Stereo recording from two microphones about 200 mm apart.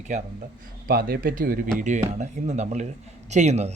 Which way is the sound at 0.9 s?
50° right (ahead or behind).